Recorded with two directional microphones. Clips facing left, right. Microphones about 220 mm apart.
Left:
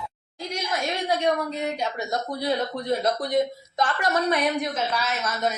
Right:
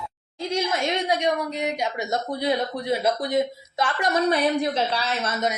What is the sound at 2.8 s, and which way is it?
A woman's voice, 5° right (ahead or behind).